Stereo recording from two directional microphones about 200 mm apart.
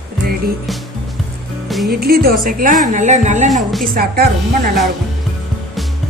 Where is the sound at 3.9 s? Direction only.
50° right (ahead or behind).